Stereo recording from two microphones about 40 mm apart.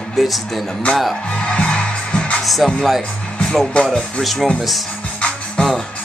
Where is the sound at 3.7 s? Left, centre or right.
Left.